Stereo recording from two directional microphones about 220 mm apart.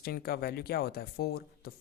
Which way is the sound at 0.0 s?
45° left (ahead or behind).